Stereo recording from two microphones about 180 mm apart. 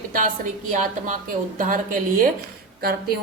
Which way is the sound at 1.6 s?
45° right (ahead or behind).